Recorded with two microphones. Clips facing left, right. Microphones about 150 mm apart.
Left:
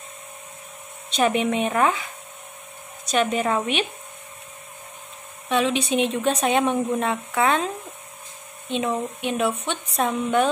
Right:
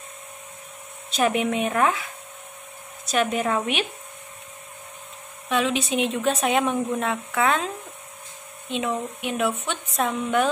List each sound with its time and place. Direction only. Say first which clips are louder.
1.1 s speech: left 1 dB; 5° right (ahead or behind)
3.1 s speech: left 1 dB; centre (ahead or behind)
5.5 s speech: left 2 dB; centre (ahead or behind)